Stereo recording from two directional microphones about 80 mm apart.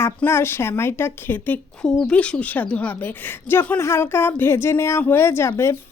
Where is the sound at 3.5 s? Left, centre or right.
Left.